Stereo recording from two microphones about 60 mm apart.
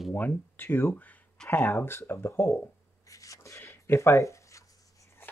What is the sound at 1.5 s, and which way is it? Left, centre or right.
Speech, left.